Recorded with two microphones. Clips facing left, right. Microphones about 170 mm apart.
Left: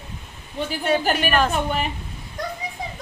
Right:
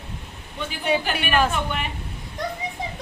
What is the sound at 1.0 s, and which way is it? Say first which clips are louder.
Speech: left 5 dB; 40° left (ahead or behind).